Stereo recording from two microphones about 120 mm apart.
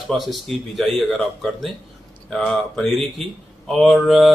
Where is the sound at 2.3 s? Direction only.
5° left (ahead or behind).